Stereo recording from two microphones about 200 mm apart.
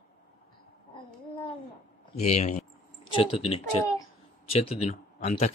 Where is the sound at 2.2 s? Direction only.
35° left (ahead or behind).